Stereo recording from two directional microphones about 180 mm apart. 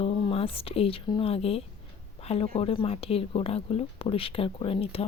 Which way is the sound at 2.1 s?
30° left (ahead or behind).